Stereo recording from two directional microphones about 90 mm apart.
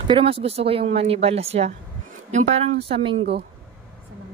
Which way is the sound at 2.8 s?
90° right.